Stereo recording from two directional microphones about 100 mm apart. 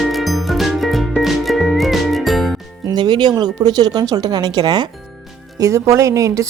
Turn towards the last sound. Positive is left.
turn(degrees=-30)  # may be behind; listen again after turning